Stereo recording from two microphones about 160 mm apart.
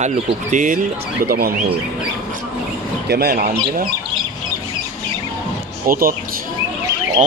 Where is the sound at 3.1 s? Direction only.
80° right.